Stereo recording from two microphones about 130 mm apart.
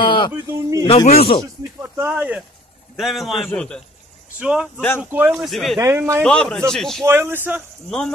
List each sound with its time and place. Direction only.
0.0 s a sound: 35° left (ahead or behind)
0.3 s speech: 25° right (ahead or behind)
0.8 s speech: 50° left (ahead or behind)
1.8 s speech: 20° right (ahead or behind)
3.0 s a man's voice: centre (ahead or behind)
4.4 s speech: 10° right (ahead or behind)
4.7 s speech: 15° left (ahead or behind)
5.0 s speech: 15° right (ahead or behind)
5.3 s a man's voice: centre (ahead or behind)
5.8 s speech: 20° right (ahead or behind)
6.2 s a man's voice: 5° left (ahead or behind)
7.1 s speech: 20° right (ahead or behind)